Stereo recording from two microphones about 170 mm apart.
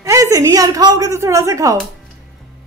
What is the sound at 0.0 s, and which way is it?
A woman's voice, 20° right (ahead or behind).